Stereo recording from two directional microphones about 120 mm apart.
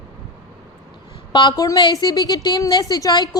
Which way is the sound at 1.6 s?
35° left (ahead or behind).